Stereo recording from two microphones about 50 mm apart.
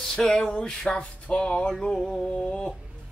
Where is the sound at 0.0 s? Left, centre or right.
Centre.